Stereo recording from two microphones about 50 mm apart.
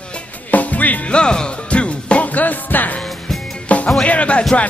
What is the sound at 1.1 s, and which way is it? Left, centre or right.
Music, centre.